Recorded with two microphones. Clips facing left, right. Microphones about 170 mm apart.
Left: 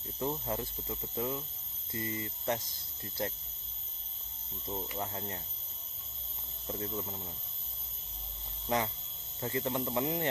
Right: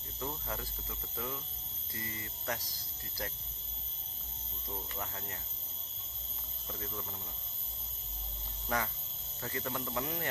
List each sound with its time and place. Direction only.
0.2 s speech: 25° left (ahead or behind)
4.7 s speech: 25° left (ahead or behind)
6.7 s speech: 25° left (ahead or behind)
8.7 s speech: 20° left (ahead or behind)